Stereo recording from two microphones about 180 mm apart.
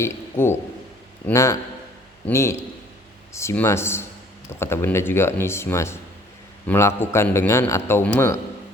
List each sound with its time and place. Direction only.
0.0 s a man's voice: 15° left (ahead or behind)